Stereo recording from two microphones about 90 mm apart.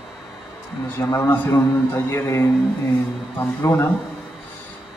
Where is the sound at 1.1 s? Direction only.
30° left (ahead or behind).